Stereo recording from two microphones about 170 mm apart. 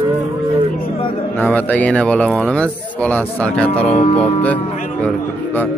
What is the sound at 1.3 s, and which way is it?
Speech, 10° left (ahead or behind).